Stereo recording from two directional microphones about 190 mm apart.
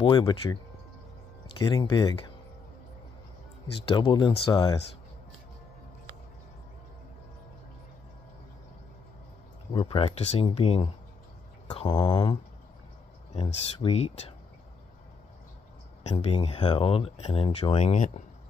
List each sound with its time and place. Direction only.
0.0 s speech: 25° left (ahead or behind)
1.6 s speech: 20° left (ahead or behind)
3.8 s speech: 25° left (ahead or behind)
9.7 s speech: 25° left (ahead or behind)
11.6 s mantra: 25° left (ahead or behind)
13.3 s speech: 35° left (ahead or behind)
16.0 s speech: 35° left (ahead or behind)